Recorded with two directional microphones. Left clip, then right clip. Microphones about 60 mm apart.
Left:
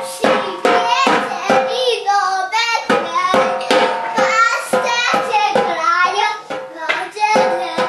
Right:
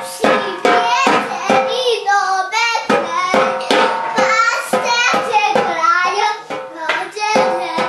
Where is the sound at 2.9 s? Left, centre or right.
Centre.